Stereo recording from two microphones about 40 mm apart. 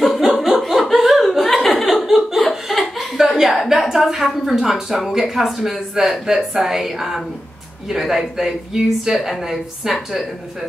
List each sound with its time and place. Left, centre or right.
0.2 s a sound: centre
0.7 s chuckle: centre
2.7 s laughter: centre
3.2 s a woman's voice: centre